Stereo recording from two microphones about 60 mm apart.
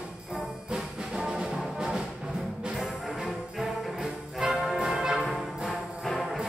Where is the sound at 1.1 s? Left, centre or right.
Centre.